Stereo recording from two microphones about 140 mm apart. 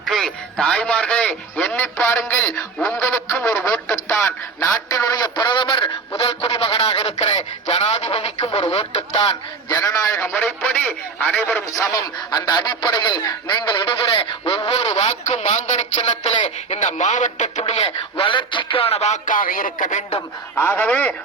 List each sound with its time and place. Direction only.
0.0 s a man's voice: centre (ahead or behind); by 9.2 s 45° left (ahead or behind)
9.2 s a man's voice: 25° left (ahead or behind)
11.7 s speech: 25° left (ahead or behind); by 15.8 s 55° left (ahead or behind)
16.0 s speech: 40° left (ahead or behind); by 20.1 s 60° left (ahead or behind)
20.6 s a man's voice: 10° left (ahead or behind)